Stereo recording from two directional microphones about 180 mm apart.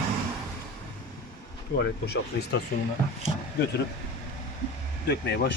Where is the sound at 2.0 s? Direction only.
65° left (ahead or behind).